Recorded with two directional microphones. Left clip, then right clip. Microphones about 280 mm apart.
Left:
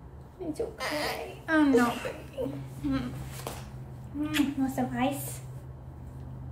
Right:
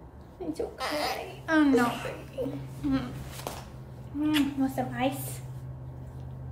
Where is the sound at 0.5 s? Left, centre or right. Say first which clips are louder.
Right 1 dB; centre.